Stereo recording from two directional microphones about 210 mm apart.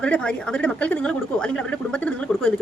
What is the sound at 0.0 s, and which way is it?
A woman's voice, 5° left (ahead or behind).